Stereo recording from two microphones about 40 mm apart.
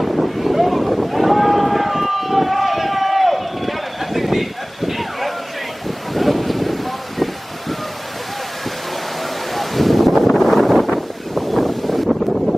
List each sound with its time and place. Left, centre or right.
0.0 s boat: centre
6.1 s wind: centre
9.5 s wind noise: centre